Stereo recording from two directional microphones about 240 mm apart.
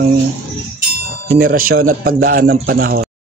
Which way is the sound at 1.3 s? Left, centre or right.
Right.